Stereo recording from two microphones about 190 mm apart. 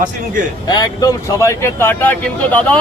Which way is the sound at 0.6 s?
20° left (ahead or behind).